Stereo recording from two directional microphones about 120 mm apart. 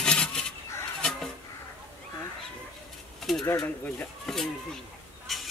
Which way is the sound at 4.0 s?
5° left (ahead or behind).